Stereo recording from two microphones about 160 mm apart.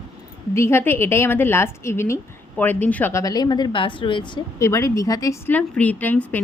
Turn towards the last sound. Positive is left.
turn(degrees=10)  # may be behind; listen again after turning